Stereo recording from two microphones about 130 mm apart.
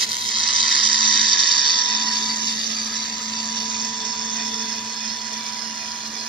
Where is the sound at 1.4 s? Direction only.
40° right (ahead or behind).